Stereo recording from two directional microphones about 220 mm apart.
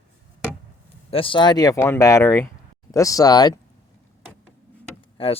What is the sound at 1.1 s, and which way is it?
Speech, 25° left (ahead or behind).